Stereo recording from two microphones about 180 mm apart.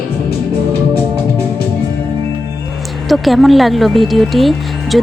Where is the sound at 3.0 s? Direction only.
Centre (ahead or behind).